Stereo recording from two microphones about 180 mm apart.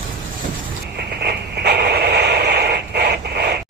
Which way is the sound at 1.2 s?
60° right (ahead or behind).